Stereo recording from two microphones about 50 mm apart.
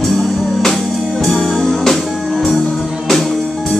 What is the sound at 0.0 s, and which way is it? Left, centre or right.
Music, centre.